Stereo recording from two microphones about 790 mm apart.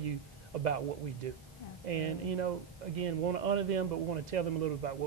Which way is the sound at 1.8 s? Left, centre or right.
Right.